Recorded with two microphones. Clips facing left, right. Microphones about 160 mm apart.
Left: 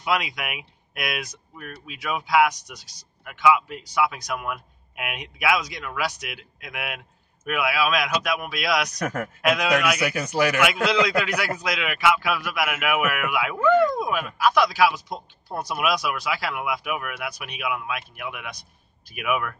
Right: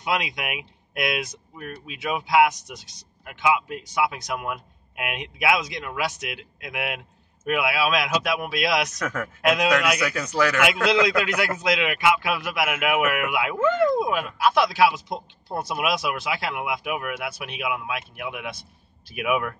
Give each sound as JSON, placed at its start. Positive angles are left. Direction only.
{"t": 0.0, "sound": "speech", "side_deg": -25}
{"t": 9.9, "sound": "speech", "side_deg": 30}
{"t": 11.1, "sound": "speech", "side_deg": -25}